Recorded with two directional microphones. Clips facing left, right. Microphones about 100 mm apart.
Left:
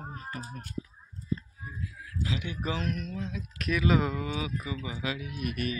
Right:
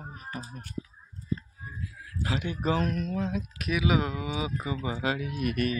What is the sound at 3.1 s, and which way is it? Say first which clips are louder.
Speech: right 6 dB; 50° right (ahead or behind).